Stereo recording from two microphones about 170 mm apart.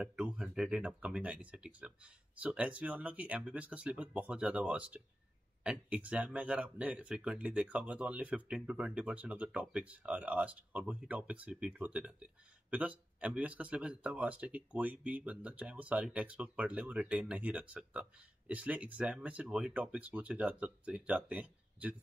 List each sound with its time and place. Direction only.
0.0 s speech: 5° right (ahead or behind)